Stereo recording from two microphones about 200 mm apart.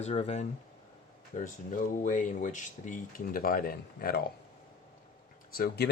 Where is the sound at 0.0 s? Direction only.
35° left (ahead or behind).